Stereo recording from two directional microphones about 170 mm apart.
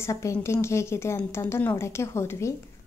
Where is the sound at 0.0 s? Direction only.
15° left (ahead or behind).